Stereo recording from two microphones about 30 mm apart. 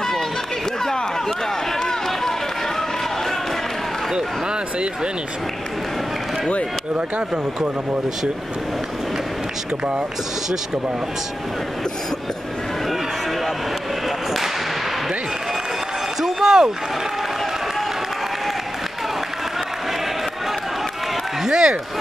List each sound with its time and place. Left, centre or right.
1.8 s run: centre
7.2 s speech: right
16.2 s a sound: centre
21.5 s a man's voice: centre